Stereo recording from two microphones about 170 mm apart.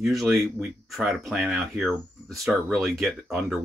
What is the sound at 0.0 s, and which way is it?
Speech, centre (ahead or behind).